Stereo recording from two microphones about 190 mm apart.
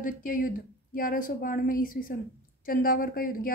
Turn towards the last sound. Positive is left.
turn(degrees=50)  # may be behind; listen again after turning